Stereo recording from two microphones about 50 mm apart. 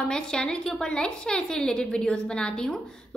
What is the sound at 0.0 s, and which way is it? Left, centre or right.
A woman's voice, centre.